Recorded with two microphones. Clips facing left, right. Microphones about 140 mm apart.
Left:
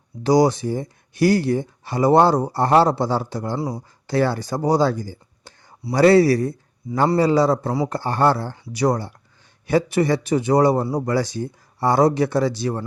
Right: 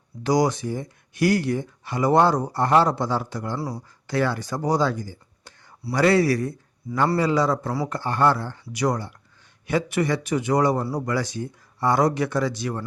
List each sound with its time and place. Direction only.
0.2 s speech: 30° left (ahead or behind)
3.6 s speech: 20° left (ahead or behind)
4.0 s speech: 30° left (ahead or behind)